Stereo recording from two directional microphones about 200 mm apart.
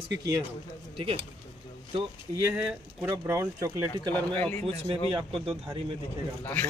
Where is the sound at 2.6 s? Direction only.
10° right (ahead or behind).